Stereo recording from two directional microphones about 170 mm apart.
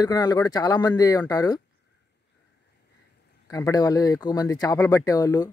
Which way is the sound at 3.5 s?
20° left (ahead or behind).